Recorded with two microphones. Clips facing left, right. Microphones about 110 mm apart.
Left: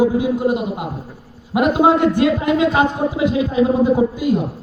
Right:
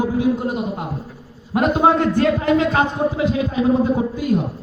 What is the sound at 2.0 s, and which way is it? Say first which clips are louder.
A man's voice: left 2 dB; 15° left (ahead or behind).